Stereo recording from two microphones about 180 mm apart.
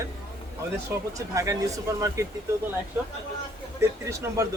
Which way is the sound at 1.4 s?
20° right (ahead or behind).